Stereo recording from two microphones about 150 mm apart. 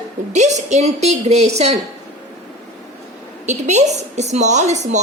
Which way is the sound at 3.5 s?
50° right (ahead or behind).